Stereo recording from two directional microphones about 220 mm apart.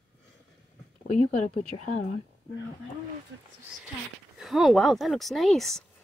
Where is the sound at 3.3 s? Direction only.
60° right (ahead or behind).